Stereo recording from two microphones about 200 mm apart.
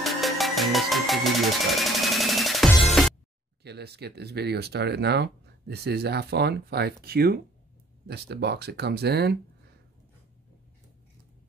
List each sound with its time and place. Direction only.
0.0 s music: centre (ahead or behind)
3.6 s speech: 55° right (ahead or behind)